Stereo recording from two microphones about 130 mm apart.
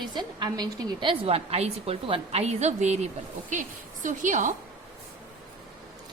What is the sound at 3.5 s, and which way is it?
A woman's voice, 80° right.